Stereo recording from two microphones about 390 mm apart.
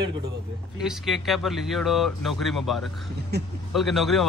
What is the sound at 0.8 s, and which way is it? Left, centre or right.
Speech, centre.